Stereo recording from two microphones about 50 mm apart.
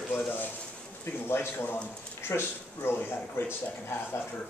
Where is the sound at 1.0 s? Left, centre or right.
Left.